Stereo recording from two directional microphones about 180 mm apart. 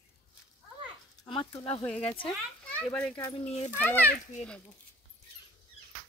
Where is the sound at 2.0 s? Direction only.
30° left (ahead or behind).